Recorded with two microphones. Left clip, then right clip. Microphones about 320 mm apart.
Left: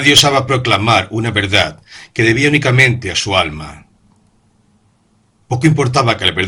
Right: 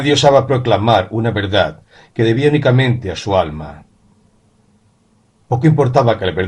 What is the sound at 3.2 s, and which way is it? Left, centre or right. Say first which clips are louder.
Speech: right 1 dB; left.